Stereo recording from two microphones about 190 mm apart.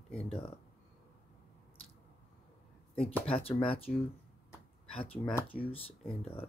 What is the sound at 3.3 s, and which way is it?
Speech, 30° left (ahead or behind).